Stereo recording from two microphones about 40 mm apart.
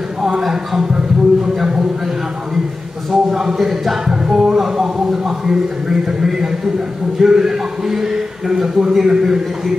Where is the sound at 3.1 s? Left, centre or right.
Centre.